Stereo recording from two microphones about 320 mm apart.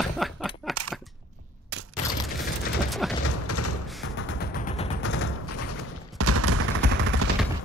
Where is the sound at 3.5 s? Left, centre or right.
Left.